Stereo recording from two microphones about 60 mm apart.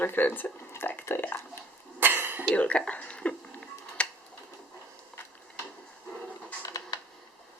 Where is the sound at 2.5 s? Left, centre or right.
Left.